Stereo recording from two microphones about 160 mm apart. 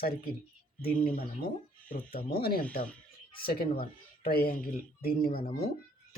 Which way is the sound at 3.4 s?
75° left (ahead or behind).